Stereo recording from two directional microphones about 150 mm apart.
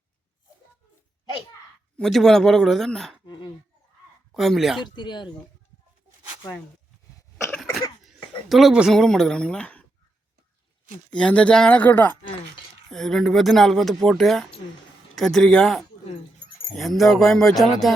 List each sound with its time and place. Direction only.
2.0 s speech: centre (ahead or behind)
3.2 s speech: 30° left (ahead or behind)
4.4 s speech: centre (ahead or behind)
4.9 s speech: 30° left (ahead or behind)
8.0 s speech: centre (ahead or behind)
11.1 s speech: 5° left (ahead or behind)